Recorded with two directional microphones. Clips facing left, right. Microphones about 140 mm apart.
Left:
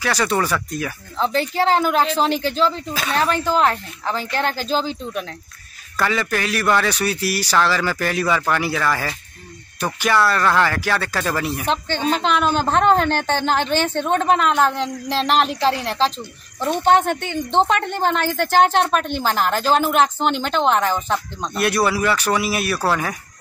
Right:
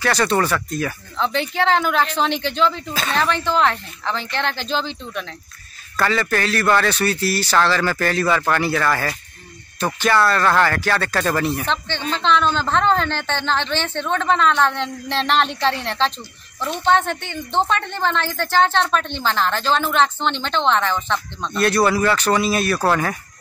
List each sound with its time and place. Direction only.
0.0 s speech: 10° left (ahead or behind)
1.1 s speech: 35° left (ahead or behind)
2.9 s speech: 5° left (ahead or behind)
3.4 s speech: 40° left (ahead or behind)
5.9 s speech: 10° left (ahead or behind)
11.6 s speech: 40° left (ahead or behind)
12.1 s speech: 10° left (ahead or behind)
13.2 s speech: 45° left (ahead or behind)
14.2 s speech: 10° left (ahead or behind)
16.6 s speech: 50° left (ahead or behind)
17.1 s speech: 15° left (ahead or behind)
20.7 s speech: 40° left (ahead or behind)
21.4 s speech: 10° left (ahead or behind)